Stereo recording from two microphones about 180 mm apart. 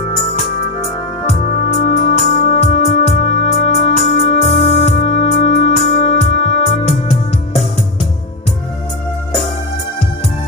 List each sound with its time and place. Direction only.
1.3 s music: 35° left (ahead or behind)